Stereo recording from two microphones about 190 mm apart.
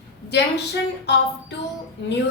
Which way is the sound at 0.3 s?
65° left (ahead or behind).